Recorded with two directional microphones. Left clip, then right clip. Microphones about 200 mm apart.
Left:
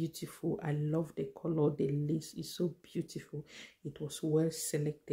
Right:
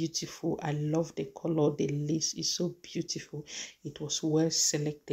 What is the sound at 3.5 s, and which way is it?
Speech, 5° left (ahead or behind).